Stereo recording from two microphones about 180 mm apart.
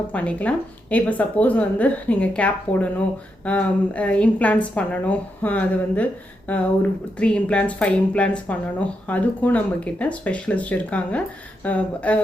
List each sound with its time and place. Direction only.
0.1 s a woman's voice: 10° left (ahead or behind)